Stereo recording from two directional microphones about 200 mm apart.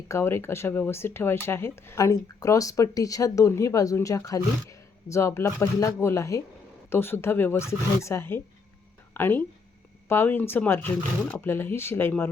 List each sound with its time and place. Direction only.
0.1 s speech: 10° left (ahead or behind)